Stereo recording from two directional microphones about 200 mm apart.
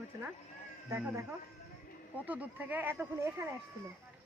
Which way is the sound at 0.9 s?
15° right (ahead or behind).